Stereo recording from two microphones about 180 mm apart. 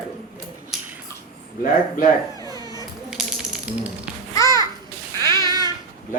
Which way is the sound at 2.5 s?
20° left (ahead or behind).